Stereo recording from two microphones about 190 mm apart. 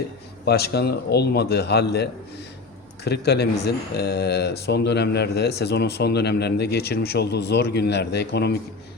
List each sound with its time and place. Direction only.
0.4 s speech: 60° left (ahead or behind)